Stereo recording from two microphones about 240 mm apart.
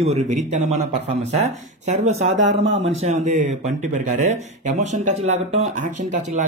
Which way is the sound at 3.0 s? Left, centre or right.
Right.